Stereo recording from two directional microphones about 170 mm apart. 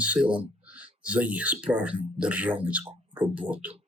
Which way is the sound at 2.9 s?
30° right (ahead or behind).